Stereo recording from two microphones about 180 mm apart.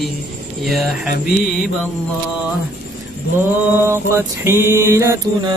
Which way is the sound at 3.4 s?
15° right (ahead or behind).